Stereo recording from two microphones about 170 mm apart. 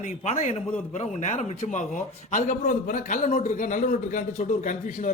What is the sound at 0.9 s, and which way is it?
A man's voice, 40° left (ahead or behind).